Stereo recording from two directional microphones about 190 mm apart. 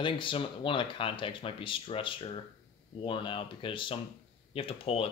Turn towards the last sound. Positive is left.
turn(degrees=30)  # may be behind; listen again after turning